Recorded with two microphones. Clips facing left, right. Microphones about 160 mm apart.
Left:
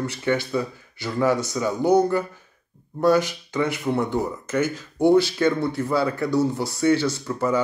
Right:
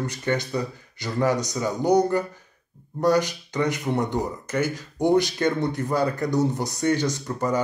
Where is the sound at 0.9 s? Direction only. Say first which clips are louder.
Left 2 dB; 15° right (ahead or behind).